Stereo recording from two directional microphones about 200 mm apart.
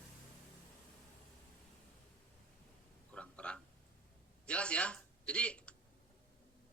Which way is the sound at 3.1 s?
5° left (ahead or behind).